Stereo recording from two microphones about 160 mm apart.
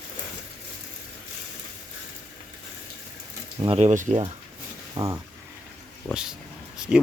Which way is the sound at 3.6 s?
45° right (ahead or behind).